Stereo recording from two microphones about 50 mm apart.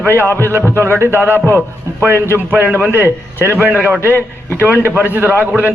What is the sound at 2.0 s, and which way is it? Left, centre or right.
A man's voice, right.